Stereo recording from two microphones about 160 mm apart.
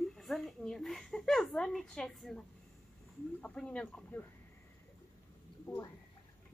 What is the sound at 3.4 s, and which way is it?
Speech, 10° left (ahead or behind).